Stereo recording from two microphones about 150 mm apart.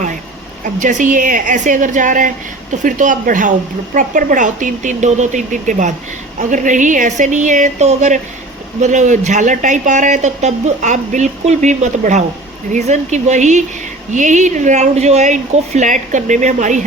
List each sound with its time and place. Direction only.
0.6 s speech: 55° right (ahead or behind)